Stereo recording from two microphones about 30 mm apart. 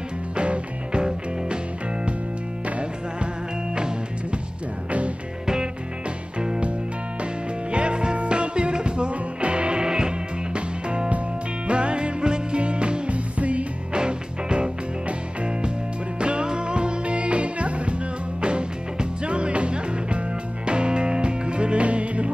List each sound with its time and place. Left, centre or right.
0.4 s music: right
7.7 s music: right
13.4 s music: right
13.9 s music: right
19.2 s music: right